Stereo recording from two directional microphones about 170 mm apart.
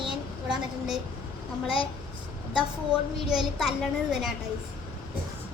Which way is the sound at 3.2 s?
5° right (ahead or behind).